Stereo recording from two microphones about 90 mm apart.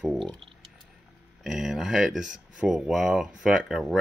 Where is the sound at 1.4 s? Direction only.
5° right (ahead or behind).